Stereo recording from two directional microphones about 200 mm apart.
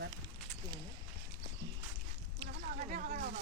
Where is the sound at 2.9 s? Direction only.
45° right (ahead or behind).